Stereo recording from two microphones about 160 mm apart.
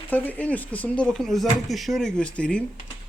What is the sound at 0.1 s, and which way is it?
Speech, 10° left (ahead or behind).